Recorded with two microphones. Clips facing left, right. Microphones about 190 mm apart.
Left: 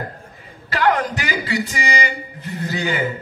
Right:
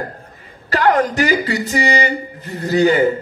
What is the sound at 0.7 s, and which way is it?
A man's voice, 40° right (ahead or behind).